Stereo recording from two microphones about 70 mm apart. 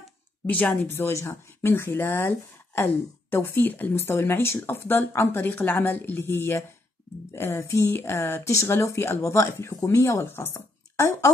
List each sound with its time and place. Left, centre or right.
0.5 s speech: left
0.8 s speech: left